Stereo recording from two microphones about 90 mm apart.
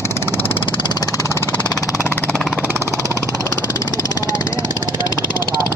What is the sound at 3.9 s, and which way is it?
Vehicle, 35° left (ahead or behind).